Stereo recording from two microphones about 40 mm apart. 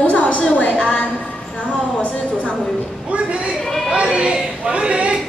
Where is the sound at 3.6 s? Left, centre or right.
Centre.